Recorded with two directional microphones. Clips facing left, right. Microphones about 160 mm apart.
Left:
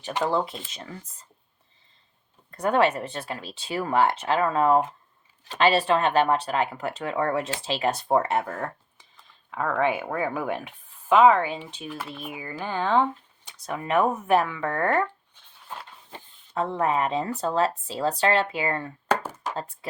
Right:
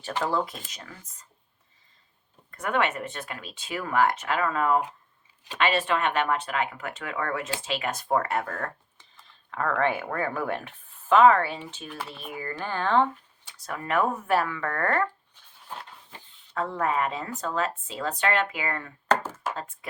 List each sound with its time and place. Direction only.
0.0 s speech: 15° left (ahead or behind)
2.5 s speech: 30° left (ahead or behind); by 15.0 s 15° left (ahead or behind)
16.6 s speech: 20° left (ahead or behind)
19.0 s chopping: 10° left (ahead or behind)
19.5 s speech: 35° left (ahead or behind)